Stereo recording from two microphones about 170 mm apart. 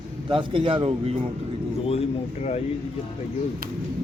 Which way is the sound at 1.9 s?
35° left (ahead or behind).